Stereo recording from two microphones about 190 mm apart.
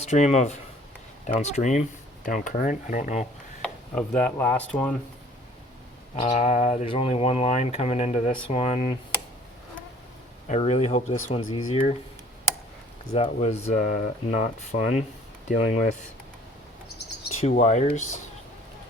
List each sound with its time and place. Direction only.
0.0 s speech: 35° left (ahead or behind)
3.6 s speech: 5° left (ahead or behind)
6.1 s speech: 35° left (ahead or behind)
10.5 s speech: 35° left (ahead or behind)
13.1 s speech: 35° left (ahead or behind)
17.6 s speech: 35° left (ahead or behind)